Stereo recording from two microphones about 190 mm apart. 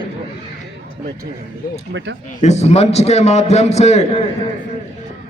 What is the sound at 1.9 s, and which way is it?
Speech, 70° right (ahead or behind).